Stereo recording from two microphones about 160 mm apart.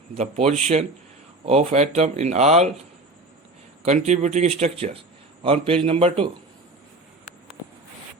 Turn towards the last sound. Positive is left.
turn(degrees=-35)  # may be behind; listen again after turning